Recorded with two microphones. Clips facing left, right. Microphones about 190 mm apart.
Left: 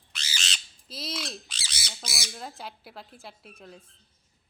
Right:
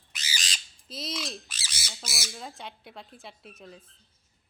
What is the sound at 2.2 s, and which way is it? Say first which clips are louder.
Speech: left 2 dB; centre (ahead or behind).